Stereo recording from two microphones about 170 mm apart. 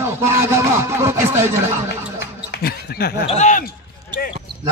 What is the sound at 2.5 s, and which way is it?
Speech, 65° left (ahead or behind).